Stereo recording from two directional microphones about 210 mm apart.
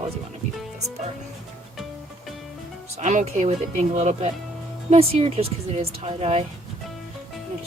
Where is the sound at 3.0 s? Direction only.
35° right (ahead or behind).